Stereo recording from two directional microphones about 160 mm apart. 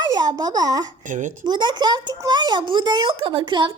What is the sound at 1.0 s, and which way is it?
Speech, 50° right (ahead or behind).